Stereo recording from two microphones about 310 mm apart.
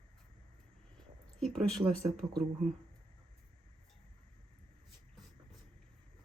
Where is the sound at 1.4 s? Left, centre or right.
Centre.